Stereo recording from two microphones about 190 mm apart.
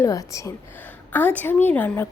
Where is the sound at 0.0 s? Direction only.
15° left (ahead or behind).